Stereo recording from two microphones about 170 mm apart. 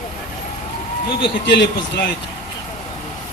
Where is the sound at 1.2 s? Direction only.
80° left.